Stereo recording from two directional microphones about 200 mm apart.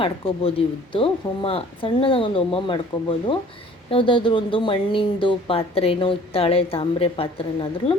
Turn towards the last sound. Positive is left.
turn(degrees=30)  # may be behind; listen again after turning